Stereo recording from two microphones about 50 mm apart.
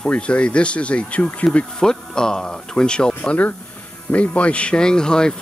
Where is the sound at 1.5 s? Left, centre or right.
Centre.